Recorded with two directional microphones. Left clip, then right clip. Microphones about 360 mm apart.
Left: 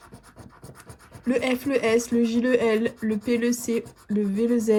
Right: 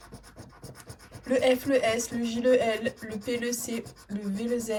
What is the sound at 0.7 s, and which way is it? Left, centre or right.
Rub, centre.